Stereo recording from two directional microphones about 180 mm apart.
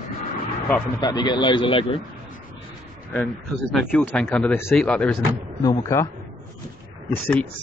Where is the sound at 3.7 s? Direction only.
10° left (ahead or behind).